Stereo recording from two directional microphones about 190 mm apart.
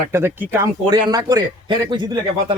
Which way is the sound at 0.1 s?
10° right (ahead or behind).